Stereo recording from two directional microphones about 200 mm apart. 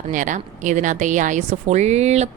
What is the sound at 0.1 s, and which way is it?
A woman's voice, 40° right (ahead or behind).